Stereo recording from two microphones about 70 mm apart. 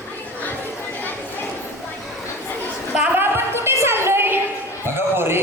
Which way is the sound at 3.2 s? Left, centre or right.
Right.